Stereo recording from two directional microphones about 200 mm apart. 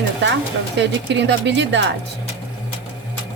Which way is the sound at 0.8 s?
60° right (ahead or behind).